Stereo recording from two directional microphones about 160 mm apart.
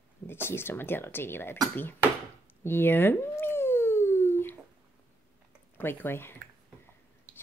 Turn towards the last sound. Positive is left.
turn(degrees=15)  # may be behind; listen again after turning